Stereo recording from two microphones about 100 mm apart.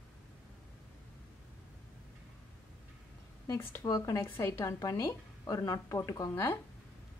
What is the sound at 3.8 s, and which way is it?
A woman's voice, 35° left (ahead or behind).